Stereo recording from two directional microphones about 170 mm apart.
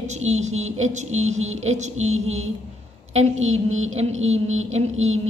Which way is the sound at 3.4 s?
40° right (ahead or behind).